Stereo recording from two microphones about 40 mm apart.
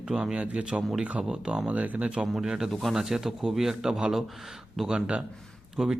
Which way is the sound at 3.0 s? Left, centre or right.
Centre.